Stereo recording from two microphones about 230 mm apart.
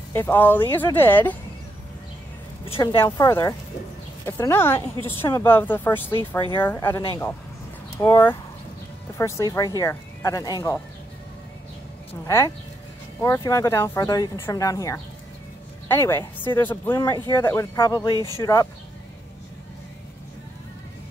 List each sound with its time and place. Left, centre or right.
0.1 s speech: centre
2.6 s a woman's voice: left
3.0 s speech: centre
13.2 s speech: centre
18.1 s speech: centre
18.4 s speech: centre